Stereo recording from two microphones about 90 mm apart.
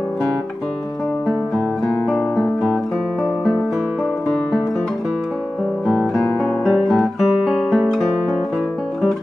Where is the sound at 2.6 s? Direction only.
10° right (ahead or behind).